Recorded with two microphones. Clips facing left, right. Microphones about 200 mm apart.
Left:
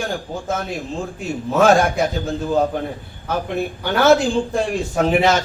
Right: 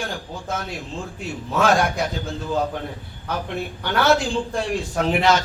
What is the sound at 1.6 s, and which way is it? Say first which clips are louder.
Speech: left 5 dB; 45° left (ahead or behind).